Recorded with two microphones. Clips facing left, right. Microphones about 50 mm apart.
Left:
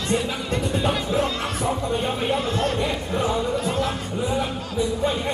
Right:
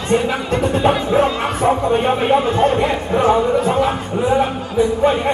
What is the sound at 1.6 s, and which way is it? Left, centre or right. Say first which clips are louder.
Speech: right 10 dB; right.